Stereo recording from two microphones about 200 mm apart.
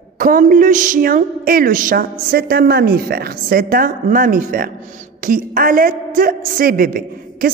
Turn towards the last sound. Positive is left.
turn(degrees=-45)  # may be behind; listen again after turning